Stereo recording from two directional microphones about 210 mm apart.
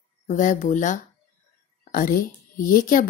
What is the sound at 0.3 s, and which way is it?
Speech, 35° left (ahead or behind).